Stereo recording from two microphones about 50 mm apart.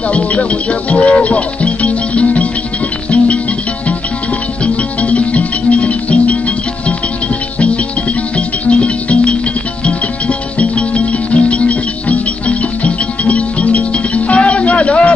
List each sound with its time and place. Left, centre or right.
0.1 s music: left
5.0 s music: left
8.4 s music: left